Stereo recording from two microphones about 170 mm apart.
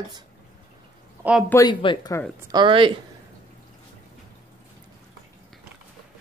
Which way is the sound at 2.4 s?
25° right (ahead or behind).